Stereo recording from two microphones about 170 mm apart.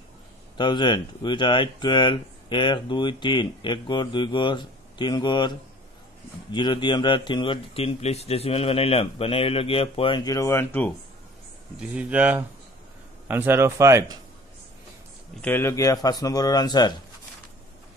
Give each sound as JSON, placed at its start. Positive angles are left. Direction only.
{"t": 0.6, "sound": "speech", "side_deg": 25}
{"t": 12.0, "sound": "speech", "side_deg": -10}
{"t": 15.4, "sound": "speech", "side_deg": 15}